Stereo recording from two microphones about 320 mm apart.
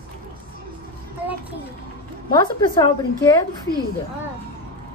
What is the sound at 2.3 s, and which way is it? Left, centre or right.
A woman's voice, centre.